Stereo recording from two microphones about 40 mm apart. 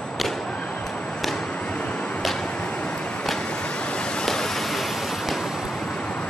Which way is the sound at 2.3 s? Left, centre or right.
Left.